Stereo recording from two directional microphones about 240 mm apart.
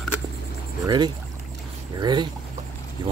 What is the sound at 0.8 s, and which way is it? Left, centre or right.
Speech, centre.